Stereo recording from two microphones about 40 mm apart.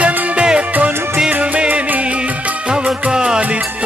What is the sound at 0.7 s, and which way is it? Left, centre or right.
Music, right.